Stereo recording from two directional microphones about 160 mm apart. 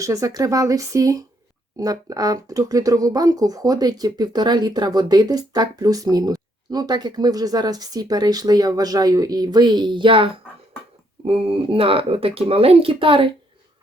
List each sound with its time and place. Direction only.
0.0 s speech: 20° right (ahead or behind)